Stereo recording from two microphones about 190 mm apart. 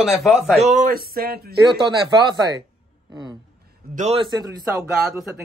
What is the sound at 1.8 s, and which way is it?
Speech, 25° right (ahead or behind).